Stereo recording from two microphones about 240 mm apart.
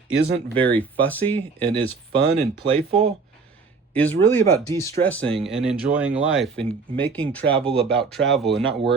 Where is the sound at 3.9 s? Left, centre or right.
Centre.